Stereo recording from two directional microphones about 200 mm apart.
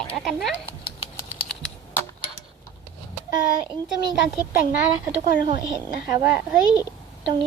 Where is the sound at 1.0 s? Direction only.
25° left (ahead or behind).